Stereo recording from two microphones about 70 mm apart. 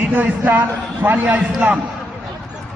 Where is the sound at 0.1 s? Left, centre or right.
Right.